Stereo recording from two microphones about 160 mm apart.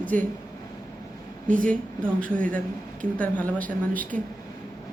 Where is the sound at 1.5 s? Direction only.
55° right (ahead or behind).